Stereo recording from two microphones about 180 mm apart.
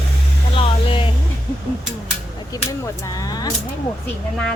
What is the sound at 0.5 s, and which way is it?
Speech, 30° left (ahead or behind).